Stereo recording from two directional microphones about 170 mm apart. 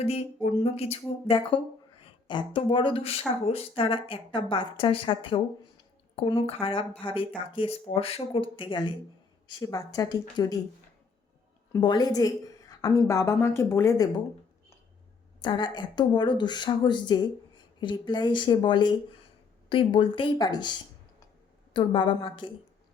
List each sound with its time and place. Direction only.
0.6 s a woman's voice: 35° left (ahead or behind)
11.8 s a woman's voice: 25° left (ahead or behind)
15.4 s a woman's voice: 25° left (ahead or behind)